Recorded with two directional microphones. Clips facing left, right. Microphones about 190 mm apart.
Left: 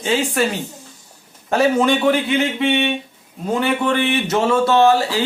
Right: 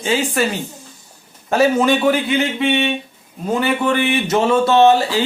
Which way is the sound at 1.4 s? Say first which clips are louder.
Right 1 dB; 5° right (ahead or behind).